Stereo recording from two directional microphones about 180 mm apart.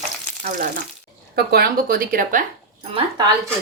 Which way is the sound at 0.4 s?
55° right (ahead or behind).